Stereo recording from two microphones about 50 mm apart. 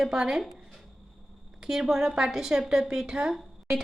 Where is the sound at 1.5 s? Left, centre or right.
Centre.